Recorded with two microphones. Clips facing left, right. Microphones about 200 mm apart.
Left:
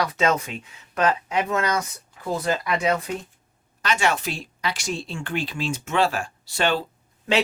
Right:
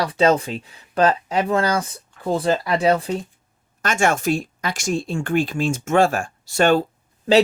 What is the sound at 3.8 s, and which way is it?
Speech, 50° right (ahead or behind).